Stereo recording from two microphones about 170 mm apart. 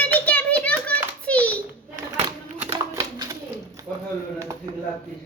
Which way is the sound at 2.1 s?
30° right (ahead or behind).